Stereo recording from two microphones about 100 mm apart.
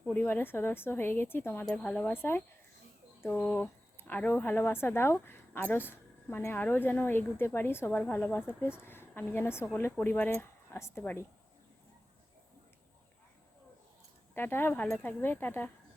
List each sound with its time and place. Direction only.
0.1 s speech: 20° left (ahead or behind)
1.7 s speech: 10° left (ahead or behind)
2.1 s speech: 25° left (ahead or behind)
3.3 s speech: 10° left (ahead or behind)
14.3 s speech: 20° left (ahead or behind)